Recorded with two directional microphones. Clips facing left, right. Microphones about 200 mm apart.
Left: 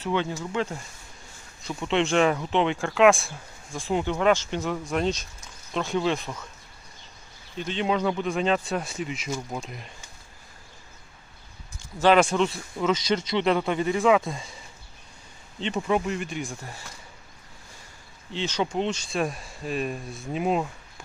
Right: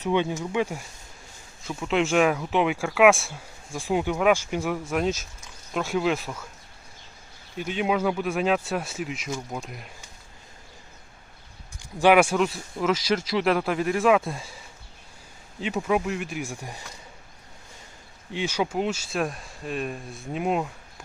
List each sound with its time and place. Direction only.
0.0 s speech: 15° right (ahead or behind)
1.6 s speech: centre (ahead or behind)
7.5 s speech: 10° right (ahead or behind)
11.8 s speech: 15° right (ahead or behind)
15.6 s speech: 5° right (ahead or behind)
18.3 s speech: 10° right (ahead or behind)